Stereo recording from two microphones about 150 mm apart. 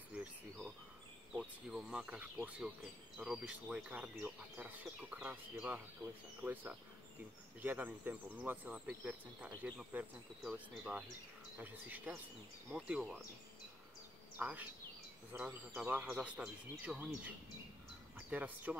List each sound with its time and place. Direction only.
0.1 s insect: 5° right (ahead or behind)
1.4 s speech: 5° right (ahead or behind)
14.4 s speech: 10° right (ahead or behind)
18.1 s speech: 10° right (ahead or behind)